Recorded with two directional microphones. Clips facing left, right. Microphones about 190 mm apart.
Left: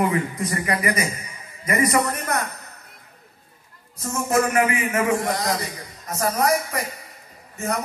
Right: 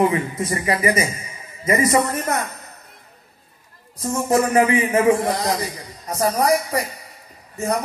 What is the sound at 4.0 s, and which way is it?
A man's voice, 30° right (ahead or behind).